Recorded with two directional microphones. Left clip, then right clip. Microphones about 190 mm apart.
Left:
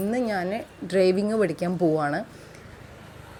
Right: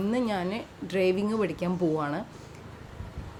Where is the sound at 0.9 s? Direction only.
20° left (ahead or behind).